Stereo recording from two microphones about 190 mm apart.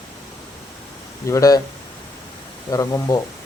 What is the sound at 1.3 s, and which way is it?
Speech, 15° left (ahead or behind).